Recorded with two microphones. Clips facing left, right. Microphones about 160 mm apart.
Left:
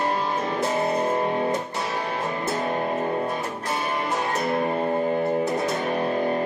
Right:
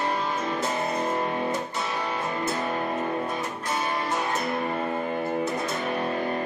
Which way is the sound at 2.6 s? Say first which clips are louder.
Left 3 dB; 40° left (ahead or behind).